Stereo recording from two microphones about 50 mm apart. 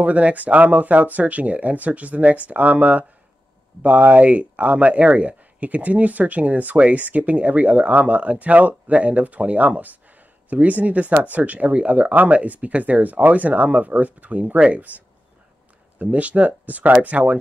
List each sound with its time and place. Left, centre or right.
0.0 s speech: right
14.4 s speech: right
16.0 s speech: right